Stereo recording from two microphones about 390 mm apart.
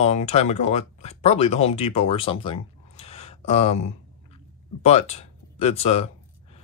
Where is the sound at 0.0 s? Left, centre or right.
Centre.